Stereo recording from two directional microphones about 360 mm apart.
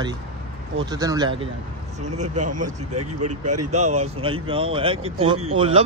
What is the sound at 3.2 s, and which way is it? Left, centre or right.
Speech, right.